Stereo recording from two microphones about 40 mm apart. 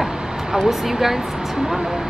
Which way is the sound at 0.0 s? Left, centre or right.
Centre.